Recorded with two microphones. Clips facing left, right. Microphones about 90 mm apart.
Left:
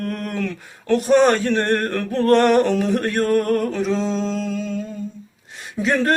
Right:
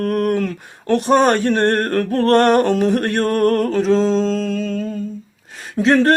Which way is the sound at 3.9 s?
40° right (ahead or behind).